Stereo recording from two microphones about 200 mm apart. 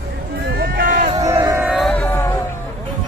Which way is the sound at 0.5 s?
50° right (ahead or behind).